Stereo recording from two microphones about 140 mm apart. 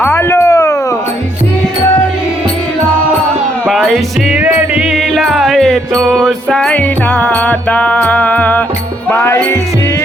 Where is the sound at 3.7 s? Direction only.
Centre (ahead or behind).